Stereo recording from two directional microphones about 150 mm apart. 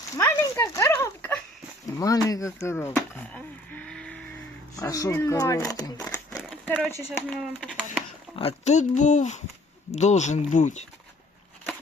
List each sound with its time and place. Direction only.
0.2 s speech: 15° left (ahead or behind)
4.8 s speech: 20° left (ahead or behind)
6.0 s speech: 10° left (ahead or behind)
7.3 s speech: centre (ahead or behind)
8.4 s speech: 45° left (ahead or behind)